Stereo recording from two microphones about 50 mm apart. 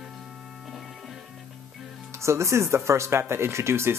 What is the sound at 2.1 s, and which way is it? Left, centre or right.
Speech, right.